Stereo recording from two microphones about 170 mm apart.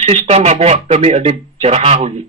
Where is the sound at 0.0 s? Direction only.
40° right (ahead or behind).